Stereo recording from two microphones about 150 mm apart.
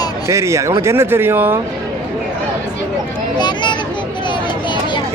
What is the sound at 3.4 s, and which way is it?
Speech, 30° left (ahead or behind).